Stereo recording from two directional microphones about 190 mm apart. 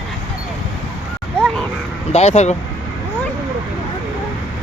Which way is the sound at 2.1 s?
35° left (ahead or behind).